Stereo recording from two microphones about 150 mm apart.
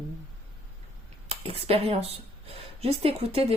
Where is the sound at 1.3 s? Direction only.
40° right (ahead or behind).